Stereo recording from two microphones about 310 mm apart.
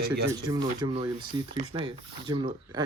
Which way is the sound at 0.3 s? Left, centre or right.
Centre.